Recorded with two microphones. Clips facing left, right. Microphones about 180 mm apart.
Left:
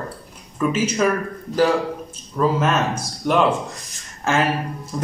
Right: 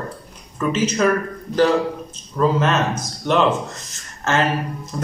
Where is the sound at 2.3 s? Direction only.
5° left (ahead or behind).